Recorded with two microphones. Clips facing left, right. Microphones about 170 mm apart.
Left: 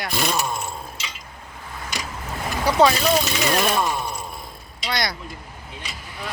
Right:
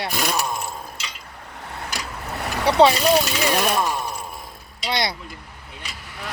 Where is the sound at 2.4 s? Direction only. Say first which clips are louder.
Right 1 dB; 70° right (ahead or behind).